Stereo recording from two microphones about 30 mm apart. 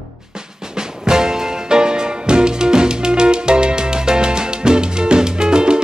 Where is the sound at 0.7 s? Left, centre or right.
Right.